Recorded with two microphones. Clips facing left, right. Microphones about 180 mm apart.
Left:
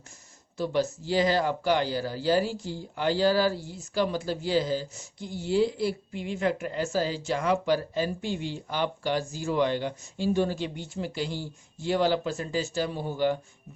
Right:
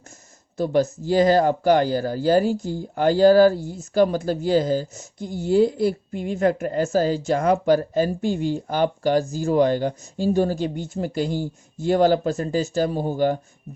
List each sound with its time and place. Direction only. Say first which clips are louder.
0.5 s speech: right 6 dB; 45° right (ahead or behind)